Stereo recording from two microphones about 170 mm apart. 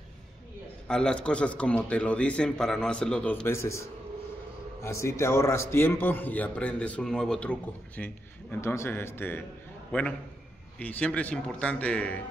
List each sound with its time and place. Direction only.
0.8 s a man's voice: 5° left (ahead or behind)
4.8 s a man's voice: 15° left (ahead or behind)